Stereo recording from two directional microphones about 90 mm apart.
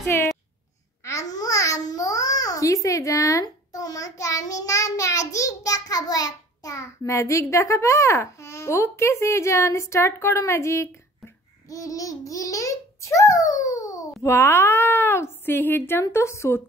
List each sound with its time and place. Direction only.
0.0 s a sound: 35° left (ahead or behind)
1.0 s babbling: 40° left (ahead or behind)
11.7 s a child's voice: 40° left (ahead or behind)